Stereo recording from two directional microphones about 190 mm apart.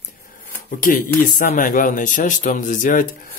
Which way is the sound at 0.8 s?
45° left (ahead or behind).